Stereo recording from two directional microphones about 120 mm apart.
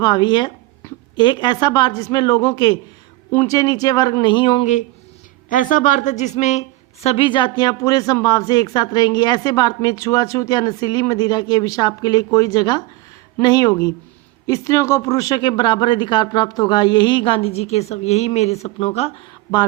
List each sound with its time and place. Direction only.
0.0 s speech: 35° left (ahead or behind)
5.5 s a woman's voice: 90° left; by 7.3 s 60° left (ahead or behind)
7.3 s speech: 40° left (ahead or behind)